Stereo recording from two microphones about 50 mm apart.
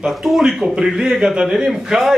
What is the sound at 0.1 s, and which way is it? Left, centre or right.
A man's voice, centre.